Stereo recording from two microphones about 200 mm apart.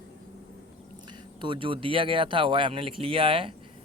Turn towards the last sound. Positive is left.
turn(degrees=-25)  # may be behind; listen again after turning